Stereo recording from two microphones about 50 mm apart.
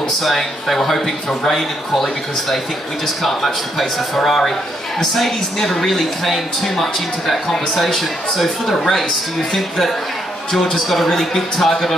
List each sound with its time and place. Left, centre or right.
0.2 s speech: centre
3.2 s speech: centre